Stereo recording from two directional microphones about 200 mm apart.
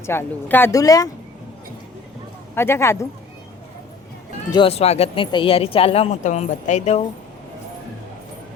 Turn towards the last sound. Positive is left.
turn(degrees=35)  # may be behind; listen again after turning